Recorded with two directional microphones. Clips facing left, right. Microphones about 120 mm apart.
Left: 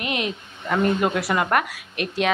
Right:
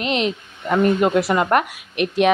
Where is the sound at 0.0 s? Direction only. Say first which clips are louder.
Right 5 dB; 25° right (ahead or behind).